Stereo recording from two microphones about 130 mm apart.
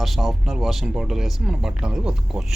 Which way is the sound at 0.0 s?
Centre (ahead or behind).